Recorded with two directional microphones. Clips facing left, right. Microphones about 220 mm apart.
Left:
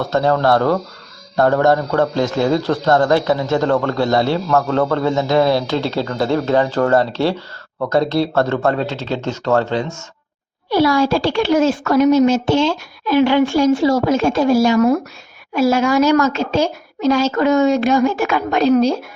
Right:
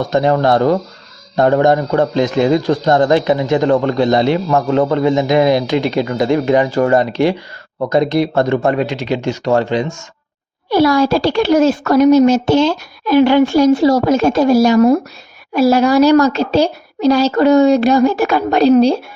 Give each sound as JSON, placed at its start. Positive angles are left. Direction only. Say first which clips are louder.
{"t": 0.0, "sound": "a man's voice", "louder": "right 2 dB", "side_deg": -15}
{"t": 10.7, "sound": "a woman's voice", "louder": "right 3 dB", "side_deg": -45}